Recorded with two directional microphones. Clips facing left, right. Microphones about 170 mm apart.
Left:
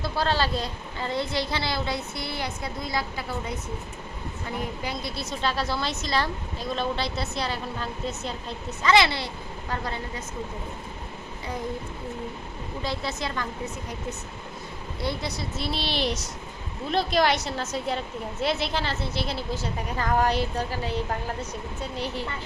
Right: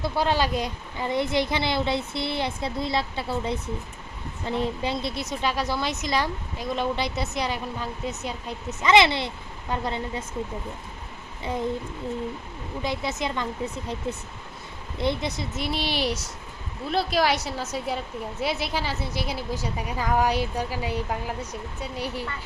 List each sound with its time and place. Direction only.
0.0 s a woman's voice: 15° right (ahead or behind)
12.8 s a woman's voice: 15° right (ahead or behind)